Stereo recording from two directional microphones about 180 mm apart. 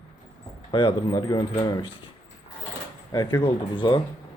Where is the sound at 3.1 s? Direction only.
20° left (ahead or behind).